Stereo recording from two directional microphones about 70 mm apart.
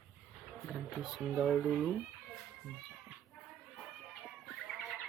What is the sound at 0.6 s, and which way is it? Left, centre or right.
Speech, centre.